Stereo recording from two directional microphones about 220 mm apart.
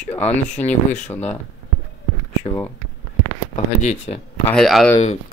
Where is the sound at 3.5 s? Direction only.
30° left (ahead or behind).